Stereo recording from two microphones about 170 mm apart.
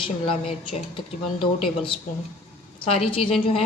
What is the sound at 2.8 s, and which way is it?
Speech, 35° left (ahead or behind).